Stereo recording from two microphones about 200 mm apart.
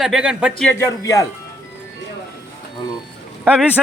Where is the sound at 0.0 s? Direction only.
5° right (ahead or behind).